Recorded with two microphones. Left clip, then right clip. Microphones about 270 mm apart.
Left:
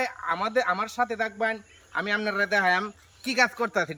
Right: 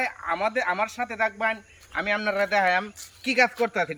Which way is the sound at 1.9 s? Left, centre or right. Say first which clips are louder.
Right 2 dB; centre.